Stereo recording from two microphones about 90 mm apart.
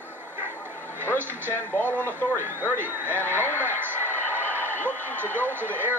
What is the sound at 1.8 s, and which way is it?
Speech, 20° left (ahead or behind).